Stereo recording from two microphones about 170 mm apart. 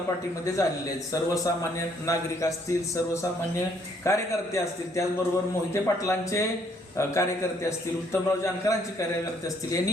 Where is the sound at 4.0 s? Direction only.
20° left (ahead or behind).